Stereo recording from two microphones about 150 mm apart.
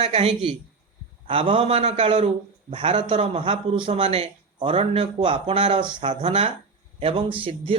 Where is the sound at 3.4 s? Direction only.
35° right (ahead or behind).